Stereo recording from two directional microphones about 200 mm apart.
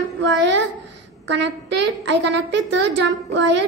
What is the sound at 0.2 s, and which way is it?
A woman's voice, 60° right (ahead or behind).